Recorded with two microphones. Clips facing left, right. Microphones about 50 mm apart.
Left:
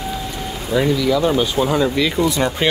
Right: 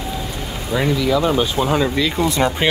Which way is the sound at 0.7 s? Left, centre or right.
Centre.